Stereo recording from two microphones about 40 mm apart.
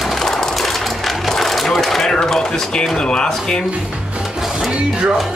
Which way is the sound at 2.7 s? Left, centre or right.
Left.